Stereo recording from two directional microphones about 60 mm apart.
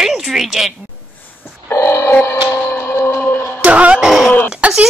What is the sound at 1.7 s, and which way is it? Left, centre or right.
Music, left.